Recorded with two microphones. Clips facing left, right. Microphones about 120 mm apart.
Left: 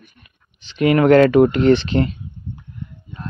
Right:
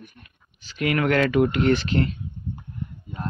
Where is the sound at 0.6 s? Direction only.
25° left (ahead or behind).